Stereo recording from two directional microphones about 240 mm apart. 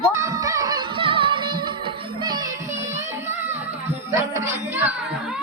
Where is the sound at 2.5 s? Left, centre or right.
Right.